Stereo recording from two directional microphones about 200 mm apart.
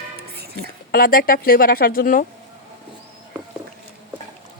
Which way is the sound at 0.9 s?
45° left (ahead or behind).